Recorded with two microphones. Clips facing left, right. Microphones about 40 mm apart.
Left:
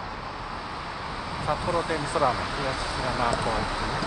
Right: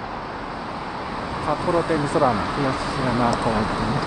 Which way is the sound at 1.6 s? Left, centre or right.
Right.